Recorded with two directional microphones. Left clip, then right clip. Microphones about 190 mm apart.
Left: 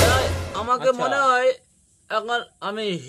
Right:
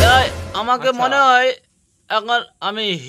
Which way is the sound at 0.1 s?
25° right (ahead or behind).